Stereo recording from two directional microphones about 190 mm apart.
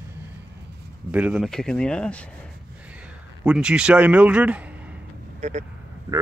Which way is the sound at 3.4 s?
5° right (ahead or behind).